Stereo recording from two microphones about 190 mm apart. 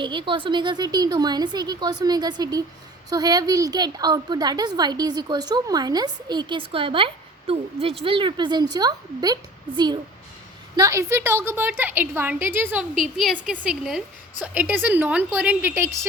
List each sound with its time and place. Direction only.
0.0 s a woman's voice: 25° right (ahead or behind)